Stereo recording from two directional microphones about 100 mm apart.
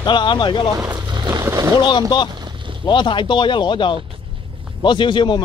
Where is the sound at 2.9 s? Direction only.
50° left (ahead or behind).